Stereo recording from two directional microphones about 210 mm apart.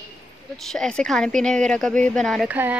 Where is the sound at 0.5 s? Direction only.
Centre (ahead or behind).